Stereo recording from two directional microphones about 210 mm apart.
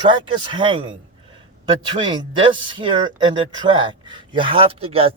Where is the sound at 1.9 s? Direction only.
20° right (ahead or behind).